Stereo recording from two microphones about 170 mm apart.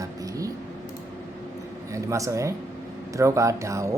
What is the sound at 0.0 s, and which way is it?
Vehicle, 20° right (ahead or behind).